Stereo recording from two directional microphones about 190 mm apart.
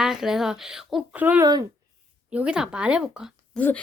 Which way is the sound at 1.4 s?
20° right (ahead or behind).